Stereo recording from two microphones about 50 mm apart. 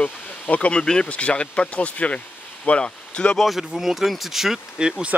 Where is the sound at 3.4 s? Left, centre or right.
Centre.